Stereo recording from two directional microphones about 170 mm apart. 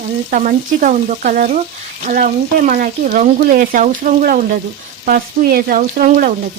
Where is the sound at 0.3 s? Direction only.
50° right (ahead or behind).